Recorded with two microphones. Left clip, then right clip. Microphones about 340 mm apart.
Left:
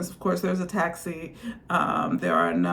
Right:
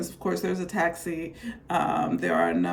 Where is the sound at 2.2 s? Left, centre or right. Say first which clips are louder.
Left 2 dB; right.